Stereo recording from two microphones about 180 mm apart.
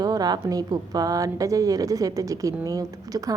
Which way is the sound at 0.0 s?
20° right (ahead or behind).